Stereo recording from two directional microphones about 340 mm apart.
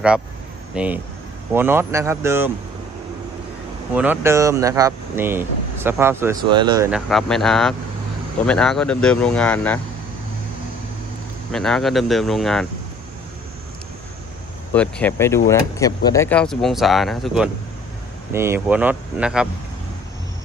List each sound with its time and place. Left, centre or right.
0.8 s speech: centre
3.9 s speech: centre
11.5 s speech: centre
14.7 s speech: centre